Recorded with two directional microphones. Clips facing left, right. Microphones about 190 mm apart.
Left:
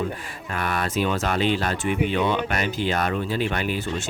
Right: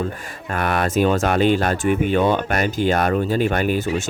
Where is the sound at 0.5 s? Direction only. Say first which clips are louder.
Right 6 dB; 55° right (ahead or behind).